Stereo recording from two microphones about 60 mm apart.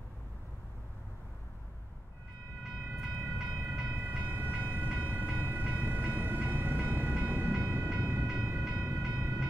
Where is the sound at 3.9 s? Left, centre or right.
Right.